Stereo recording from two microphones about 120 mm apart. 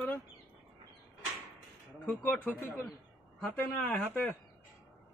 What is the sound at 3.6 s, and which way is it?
Speech, 15° left (ahead or behind).